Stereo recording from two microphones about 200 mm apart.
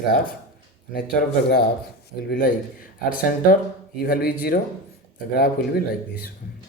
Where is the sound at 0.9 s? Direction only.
45° left (ahead or behind).